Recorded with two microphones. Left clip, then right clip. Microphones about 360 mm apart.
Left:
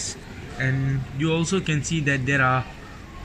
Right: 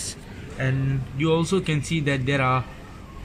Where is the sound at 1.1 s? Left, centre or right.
Right.